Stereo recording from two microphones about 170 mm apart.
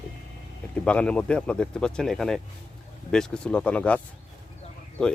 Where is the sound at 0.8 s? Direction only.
5° left (ahead or behind).